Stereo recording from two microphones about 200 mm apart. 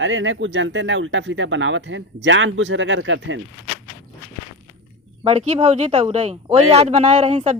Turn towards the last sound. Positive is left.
turn(degrees=-35)  # may be behind; listen again after turning